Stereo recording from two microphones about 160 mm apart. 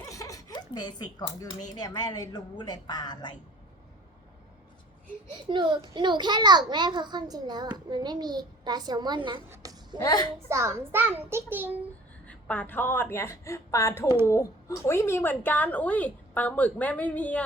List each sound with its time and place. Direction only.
0.1 s chuckle: 20° left (ahead or behind)
1.7 s a woman's voice: 25° left (ahead or behind)
5.5 s a child's voice: 30° right (ahead or behind)
9.5 s a sound: 20° right (ahead or behind)
10.0 s a woman's voice: 25° left (ahead or behind)
10.5 s a child's voice: 15° right (ahead or behind)
12.2 s a woman's voice: 10° left (ahead or behind)